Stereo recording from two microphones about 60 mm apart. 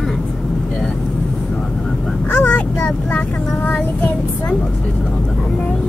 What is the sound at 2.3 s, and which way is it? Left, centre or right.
Vehicle, left.